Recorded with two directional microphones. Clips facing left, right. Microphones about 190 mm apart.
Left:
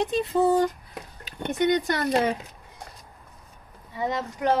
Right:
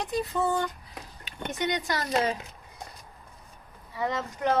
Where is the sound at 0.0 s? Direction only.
25° left (ahead or behind).